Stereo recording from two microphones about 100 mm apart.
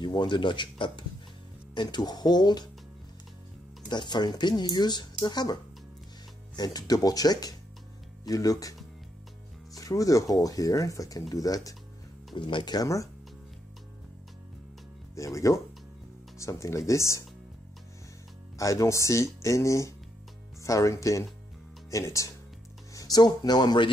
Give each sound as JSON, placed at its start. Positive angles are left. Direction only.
{"t": 0.0, "sound": "speech", "side_deg": 50}
{"t": 3.9, "sound": "speech", "side_deg": 45}
{"t": 9.8, "sound": "speech", "side_deg": 35}
{"t": 12.4, "sound": "speech", "side_deg": 50}
{"t": 12.8, "sound": "speech", "side_deg": 30}
{"t": 15.1, "sound": "speech", "side_deg": 30}
{"t": 18.6, "sound": "speech", "side_deg": 35}